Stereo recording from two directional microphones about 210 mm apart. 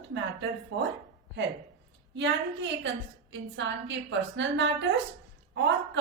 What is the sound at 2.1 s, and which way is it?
A woman's voice, 60° right (ahead or behind).